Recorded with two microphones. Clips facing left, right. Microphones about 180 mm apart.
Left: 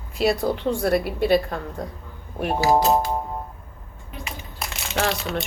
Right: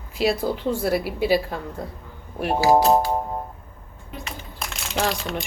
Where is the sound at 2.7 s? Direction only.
15° right (ahead or behind).